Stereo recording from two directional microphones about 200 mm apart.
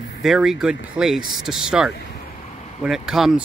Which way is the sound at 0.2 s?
Centre (ahead or behind).